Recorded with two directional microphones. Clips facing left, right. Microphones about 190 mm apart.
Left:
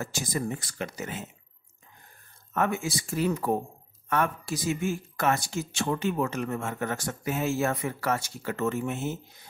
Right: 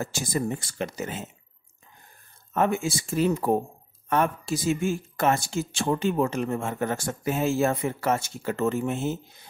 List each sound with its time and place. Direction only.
0.0 s speech: 30° right (ahead or behind)
2.5 s speech: 25° right (ahead or behind)